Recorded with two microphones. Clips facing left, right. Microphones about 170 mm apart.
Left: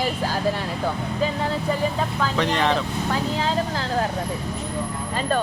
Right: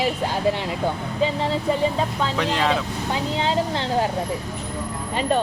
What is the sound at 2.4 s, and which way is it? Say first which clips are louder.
Speech: left 1 dB; 5° right (ahead or behind).